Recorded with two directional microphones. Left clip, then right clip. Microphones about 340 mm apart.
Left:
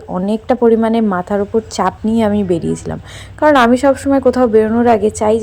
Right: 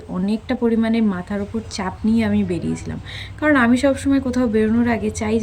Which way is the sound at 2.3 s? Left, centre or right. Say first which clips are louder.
Left 7 dB; centre.